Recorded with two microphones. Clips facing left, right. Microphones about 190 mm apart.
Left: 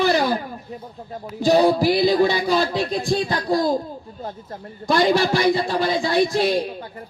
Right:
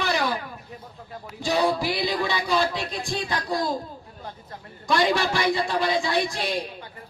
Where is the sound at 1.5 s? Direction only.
35° left (ahead or behind).